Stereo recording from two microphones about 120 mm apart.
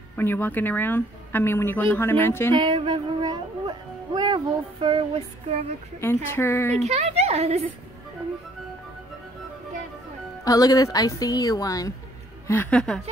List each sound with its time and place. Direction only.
0.2 s speech: 15° left (ahead or behind)
2.5 s a child's voice: 40° right (ahead or behind)
5.9 s speech: 20° left (ahead or behind)
6.8 s a woman's voice: 60° right (ahead or behind)
10.4 s speech: 30° left (ahead or behind)
12.4 s a woman's voice: 20° left (ahead or behind)
12.7 s a woman's voice: 5° left (ahead or behind)